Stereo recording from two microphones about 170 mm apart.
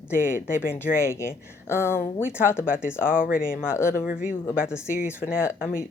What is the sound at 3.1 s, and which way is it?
Speech, 55° left (ahead or behind).